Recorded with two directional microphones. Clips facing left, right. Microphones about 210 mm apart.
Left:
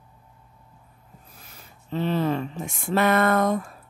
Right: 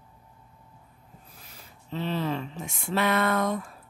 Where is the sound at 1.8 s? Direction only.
50° left (ahead or behind).